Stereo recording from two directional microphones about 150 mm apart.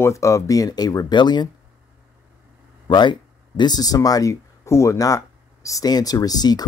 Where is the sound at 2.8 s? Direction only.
30° left (ahead or behind).